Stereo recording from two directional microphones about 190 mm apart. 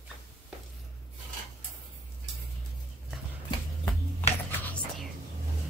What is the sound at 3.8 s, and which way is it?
Finger snapping, 10° left (ahead or behind).